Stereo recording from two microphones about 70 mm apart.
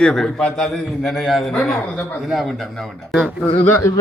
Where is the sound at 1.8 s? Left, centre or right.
Left.